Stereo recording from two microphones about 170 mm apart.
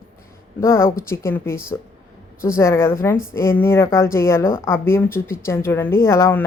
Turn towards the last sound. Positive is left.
turn(degrees=15)  # may be behind; listen again after turning